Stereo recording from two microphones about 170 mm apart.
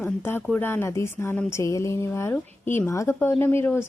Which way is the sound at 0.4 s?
10° left (ahead or behind).